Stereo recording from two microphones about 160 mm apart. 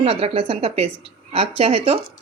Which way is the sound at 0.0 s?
35° right (ahead or behind).